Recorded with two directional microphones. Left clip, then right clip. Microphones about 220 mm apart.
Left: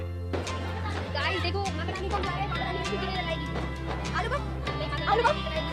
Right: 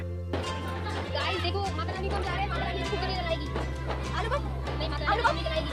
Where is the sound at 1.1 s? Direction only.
30° left (ahead or behind).